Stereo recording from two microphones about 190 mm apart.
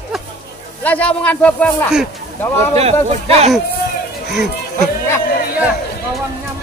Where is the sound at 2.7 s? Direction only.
35° right (ahead or behind).